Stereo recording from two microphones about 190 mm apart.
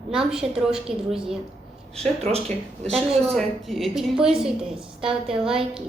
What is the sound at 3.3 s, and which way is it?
A woman's voice, centre (ahead or behind).